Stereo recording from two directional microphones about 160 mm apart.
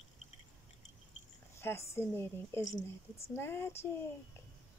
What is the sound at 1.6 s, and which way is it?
A woman's voice, 15° left (ahead or behind).